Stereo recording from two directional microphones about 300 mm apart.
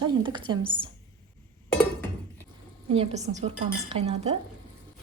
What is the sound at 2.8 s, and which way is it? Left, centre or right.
A woman's voice, centre.